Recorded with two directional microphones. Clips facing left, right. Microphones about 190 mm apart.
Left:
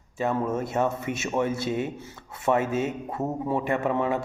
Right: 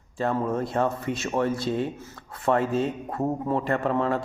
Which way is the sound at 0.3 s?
5° left (ahead or behind).